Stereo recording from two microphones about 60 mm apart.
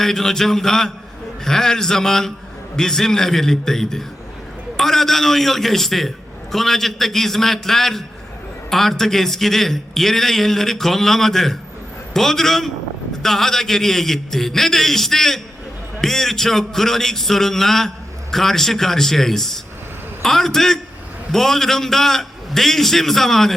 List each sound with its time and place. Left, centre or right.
0.0 s a man's voice: centre